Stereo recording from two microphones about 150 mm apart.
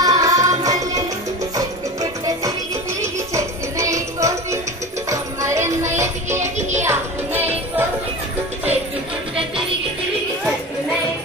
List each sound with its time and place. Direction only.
0.0 s music: 25° right (ahead or behind)